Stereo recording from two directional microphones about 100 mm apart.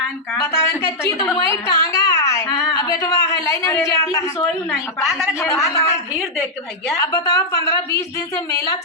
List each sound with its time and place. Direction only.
0.4 s speech: 30° left (ahead or behind)
1.5 s a sound: 35° left (ahead or behind)
2.5 s a sound: centre (ahead or behind)
2.7 s a man's voice: 35° left (ahead or behind)
5.6 s speech: 30° left (ahead or behind)
7.1 s a woman's voice: 35° left (ahead or behind)